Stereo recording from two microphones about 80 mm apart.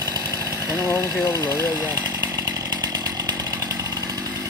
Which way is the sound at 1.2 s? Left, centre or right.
Left.